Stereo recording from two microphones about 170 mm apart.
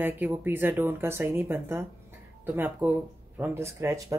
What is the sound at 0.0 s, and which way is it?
Speech, 10° right (ahead or behind).